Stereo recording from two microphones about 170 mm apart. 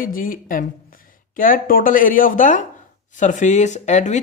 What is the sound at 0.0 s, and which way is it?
Speech, 55° left (ahead or behind).